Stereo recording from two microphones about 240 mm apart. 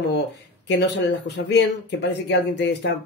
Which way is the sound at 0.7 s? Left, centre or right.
Left.